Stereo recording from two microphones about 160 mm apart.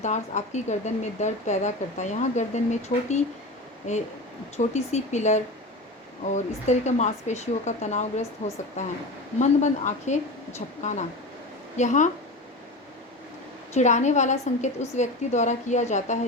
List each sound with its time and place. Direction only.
0.0 s a woman's voice: 45° left (ahead or behind)
11.8 s a woman's voice: 50° left (ahead or behind)
13.7 s a woman's voice: 45° left (ahead or behind)